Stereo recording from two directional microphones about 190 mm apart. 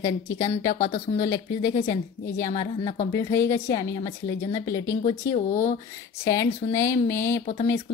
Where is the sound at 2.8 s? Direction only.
40° left (ahead or behind).